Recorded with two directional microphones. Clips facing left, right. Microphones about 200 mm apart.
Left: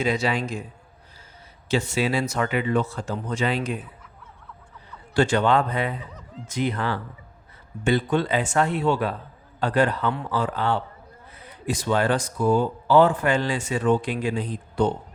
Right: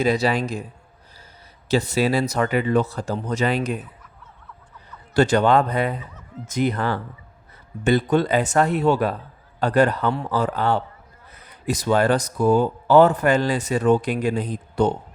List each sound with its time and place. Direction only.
0.0 s speech: 35° right (ahead or behind)
1.6 s speech: 35° right (ahead or behind)
5.1 s speech: 40° right (ahead or behind)